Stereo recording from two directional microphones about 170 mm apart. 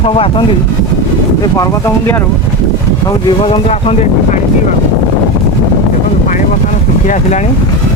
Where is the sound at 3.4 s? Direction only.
35° left (ahead or behind).